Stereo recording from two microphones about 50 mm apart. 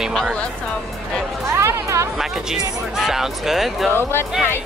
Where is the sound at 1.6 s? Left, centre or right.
Right.